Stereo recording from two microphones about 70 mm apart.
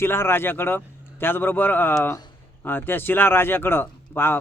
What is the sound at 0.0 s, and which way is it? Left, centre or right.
Speech, left.